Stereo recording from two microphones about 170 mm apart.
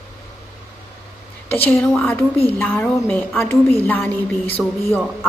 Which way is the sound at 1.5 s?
10° left (ahead or behind).